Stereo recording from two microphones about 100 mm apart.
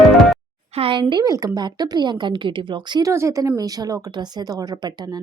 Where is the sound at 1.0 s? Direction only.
45° right (ahead or behind).